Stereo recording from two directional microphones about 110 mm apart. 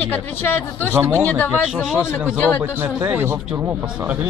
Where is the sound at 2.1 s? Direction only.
15° left (ahead or behind).